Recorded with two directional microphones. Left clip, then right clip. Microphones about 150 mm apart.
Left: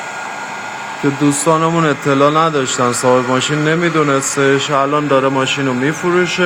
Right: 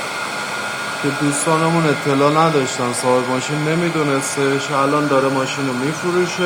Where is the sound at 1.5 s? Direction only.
30° left (ahead or behind).